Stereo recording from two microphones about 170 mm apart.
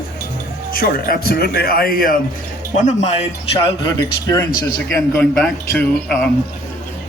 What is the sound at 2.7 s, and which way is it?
Speech, 45° left (ahead or behind).